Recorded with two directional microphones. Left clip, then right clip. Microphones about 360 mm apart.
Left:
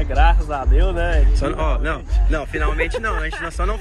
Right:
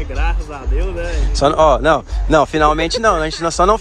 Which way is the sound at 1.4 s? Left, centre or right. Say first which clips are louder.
Right 12 dB; centre.